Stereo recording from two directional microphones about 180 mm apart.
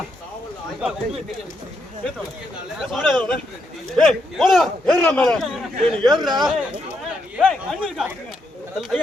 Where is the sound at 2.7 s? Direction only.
Centre (ahead or behind).